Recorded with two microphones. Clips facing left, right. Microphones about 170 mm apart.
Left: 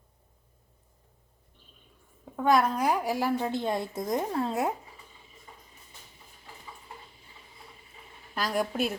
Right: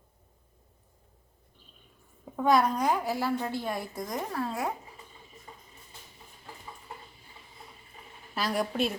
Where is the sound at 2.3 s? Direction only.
Centre (ahead or behind); by 4.7 s 25° left (ahead or behind).